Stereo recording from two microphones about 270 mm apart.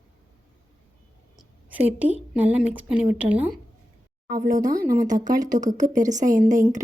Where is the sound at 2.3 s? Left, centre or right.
Centre.